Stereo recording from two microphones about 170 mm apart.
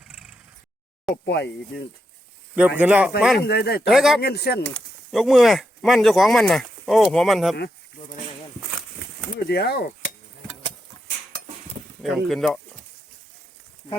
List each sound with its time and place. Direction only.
0.0 s a sound: 5° right (ahead or behind)
1.1 s speech: 75° left (ahead or behind)
2.6 s speech: 10° right (ahead or behind)
3.4 s speech: 70° left (ahead or behind)
3.8 s speech: centre (ahead or behind)
4.2 s speech: 70° left (ahead or behind)
5.1 s speech: centre (ahead or behind)
9.5 s speech: 70° left (ahead or behind)
12.0 s speech: centre (ahead or behind)